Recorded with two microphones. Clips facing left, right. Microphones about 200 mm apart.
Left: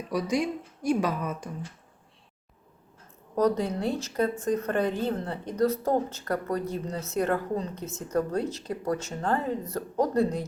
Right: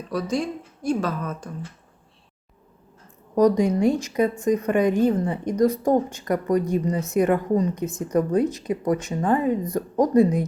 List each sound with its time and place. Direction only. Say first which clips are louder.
0.1 s a woman's voice: right 2 dB; 15° left (ahead or behind)
3.3 s a woman's voice: right 7 dB; 15° right (ahead or behind)